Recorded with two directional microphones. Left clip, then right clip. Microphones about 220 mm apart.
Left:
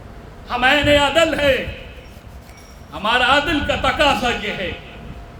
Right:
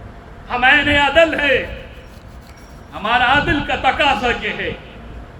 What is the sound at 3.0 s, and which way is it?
A man's voice, 25° left (ahead or behind).